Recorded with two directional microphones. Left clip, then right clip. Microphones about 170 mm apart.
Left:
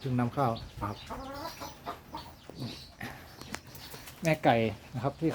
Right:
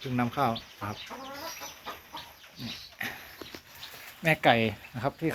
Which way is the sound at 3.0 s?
Centre (ahead or behind).